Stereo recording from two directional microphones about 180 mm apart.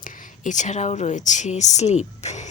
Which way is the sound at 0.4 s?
40° left (ahead or behind).